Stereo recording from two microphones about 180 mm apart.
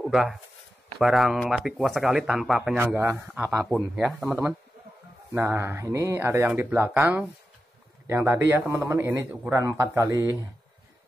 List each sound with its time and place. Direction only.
0.1 s speech: centre (ahead or behind)
2.8 s speech: 10° right (ahead or behind)
3.6 s speech: centre (ahead or behind)